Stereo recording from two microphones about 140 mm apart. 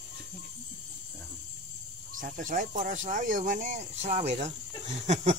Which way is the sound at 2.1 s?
75° right (ahead or behind).